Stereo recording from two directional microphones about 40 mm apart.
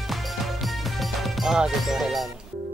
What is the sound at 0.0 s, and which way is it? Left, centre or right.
Music, centre.